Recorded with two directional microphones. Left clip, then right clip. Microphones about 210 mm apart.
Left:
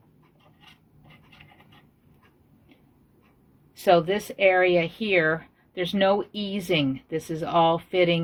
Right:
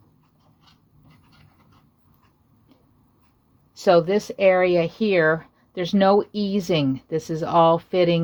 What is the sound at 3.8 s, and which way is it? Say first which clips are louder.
Speech: right 3 dB; 45° right (ahead or behind).